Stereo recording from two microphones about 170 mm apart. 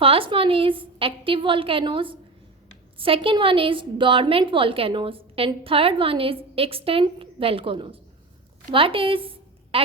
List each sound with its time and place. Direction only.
0.0 s a woman's voice: 35° right (ahead or behind)